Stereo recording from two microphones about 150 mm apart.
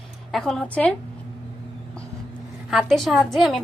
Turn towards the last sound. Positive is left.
turn(degrees=0)  # may be behind; listen again after turning